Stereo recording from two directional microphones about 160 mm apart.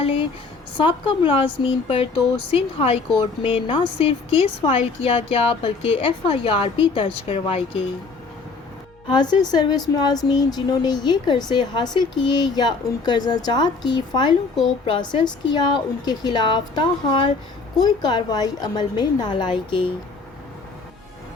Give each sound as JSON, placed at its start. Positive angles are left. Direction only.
{"t": 0.0, "sound": "a sound", "side_deg": 35}
{"t": 0.8, "sound": "a woman's voice", "side_deg": 35}
{"t": 9.0, "sound": "speech", "side_deg": 25}